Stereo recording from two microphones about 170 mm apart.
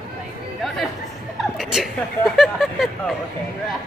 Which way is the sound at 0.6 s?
Centre (ahead or behind).